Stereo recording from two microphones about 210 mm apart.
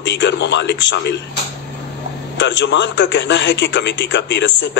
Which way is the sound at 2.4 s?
60° left (ahead or behind).